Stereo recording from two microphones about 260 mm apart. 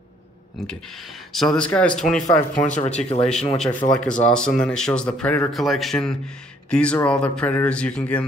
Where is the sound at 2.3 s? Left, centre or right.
Left.